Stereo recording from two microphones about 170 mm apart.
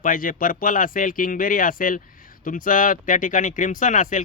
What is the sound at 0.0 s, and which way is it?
Speech, 55° left (ahead or behind).